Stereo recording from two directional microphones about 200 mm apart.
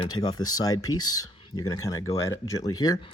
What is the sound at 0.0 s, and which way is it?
Speech, 20° left (ahead or behind).